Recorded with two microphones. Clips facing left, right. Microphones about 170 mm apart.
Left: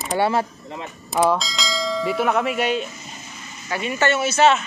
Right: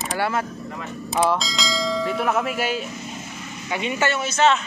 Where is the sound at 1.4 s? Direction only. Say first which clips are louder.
Right 1 dB; centre (ahead or behind).